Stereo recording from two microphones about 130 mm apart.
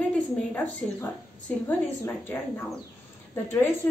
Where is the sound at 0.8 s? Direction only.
5° left (ahead or behind).